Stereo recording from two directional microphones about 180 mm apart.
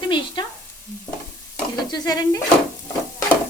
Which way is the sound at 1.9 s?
20° left (ahead or behind).